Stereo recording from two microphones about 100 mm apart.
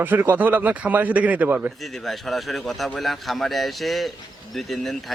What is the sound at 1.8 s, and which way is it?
Speech, centre (ahead or behind).